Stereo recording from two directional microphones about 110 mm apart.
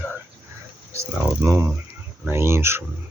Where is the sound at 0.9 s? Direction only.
25° right (ahead or behind).